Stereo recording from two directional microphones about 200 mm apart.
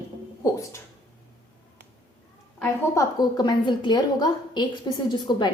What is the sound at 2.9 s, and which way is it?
A woman's voice, 20° left (ahead or behind).